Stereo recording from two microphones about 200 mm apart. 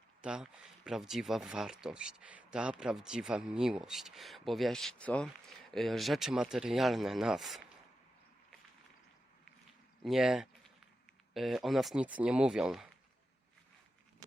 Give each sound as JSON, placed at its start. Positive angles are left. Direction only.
{"t": 0.2, "sound": "speech", "side_deg": -5}
{"t": 10.0, "sound": "speech", "side_deg": 0}